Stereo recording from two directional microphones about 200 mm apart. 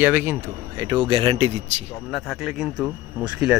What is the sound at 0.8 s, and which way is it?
Speech, 20° right (ahead or behind).